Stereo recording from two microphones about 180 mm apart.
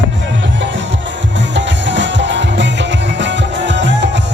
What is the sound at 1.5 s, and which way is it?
Music, 85° right.